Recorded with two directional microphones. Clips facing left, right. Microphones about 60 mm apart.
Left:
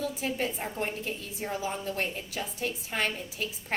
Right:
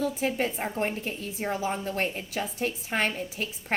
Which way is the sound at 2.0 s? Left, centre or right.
Right.